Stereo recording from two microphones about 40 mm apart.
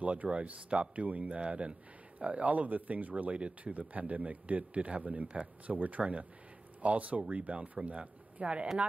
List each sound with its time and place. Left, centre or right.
0.0 s speech: right
3.3 s speech: right